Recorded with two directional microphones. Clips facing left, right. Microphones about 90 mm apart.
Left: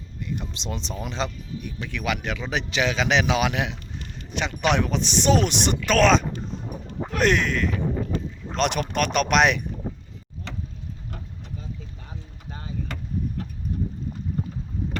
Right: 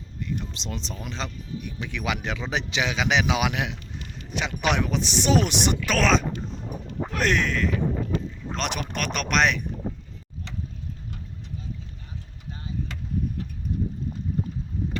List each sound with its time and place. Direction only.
0.2 s a sound: 5° left (ahead or behind)
0.9 s speech: 5° left (ahead or behind)
1.6 s speech: 15° right (ahead or behind); by 9.6 s 5° left (ahead or behind)
12.5 s vehicle: 40° left (ahead or behind)